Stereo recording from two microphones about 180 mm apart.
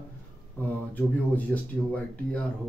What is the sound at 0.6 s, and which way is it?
Speech, 10° left (ahead or behind).